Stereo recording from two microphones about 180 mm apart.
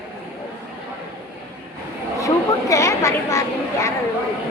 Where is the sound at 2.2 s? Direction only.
15° left (ahead or behind).